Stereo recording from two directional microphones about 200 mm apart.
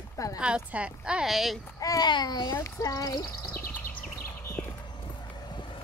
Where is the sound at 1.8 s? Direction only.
20° left (ahead or behind).